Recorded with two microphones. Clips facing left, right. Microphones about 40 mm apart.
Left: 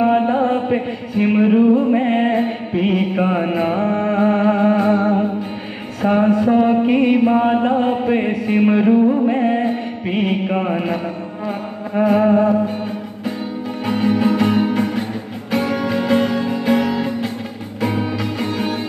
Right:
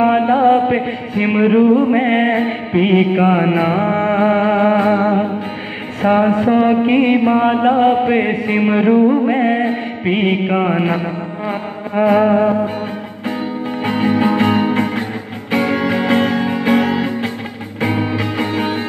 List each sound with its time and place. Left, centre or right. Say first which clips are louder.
0.0 s music: right 3 dB; right
13.8 s music: right 1 dB; right